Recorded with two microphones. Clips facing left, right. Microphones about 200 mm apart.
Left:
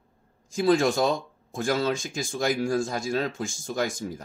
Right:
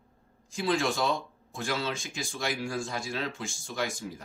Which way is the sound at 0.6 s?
45° left (ahead or behind).